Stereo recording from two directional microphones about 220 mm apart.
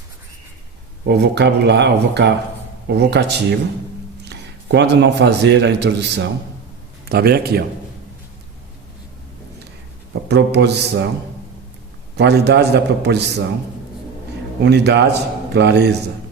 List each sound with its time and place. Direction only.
1.0 s a man's voice: 50° right (ahead or behind)
10.2 s speech: 50° right (ahead or behind)
12.1 s speech: 50° right (ahead or behind)
14.6 s speech: 50° right (ahead or behind)